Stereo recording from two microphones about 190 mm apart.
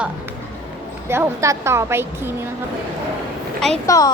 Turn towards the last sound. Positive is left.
turn(degrees=20)  # may be behind; listen again after turning